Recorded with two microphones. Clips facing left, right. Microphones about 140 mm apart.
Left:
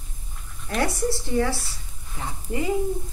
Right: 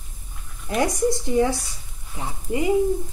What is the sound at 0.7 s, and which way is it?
A woman's voice, 15° right (ahead or behind).